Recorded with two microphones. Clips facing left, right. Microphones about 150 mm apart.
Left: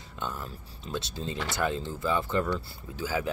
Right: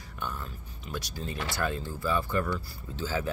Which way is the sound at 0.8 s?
25° left (ahead or behind).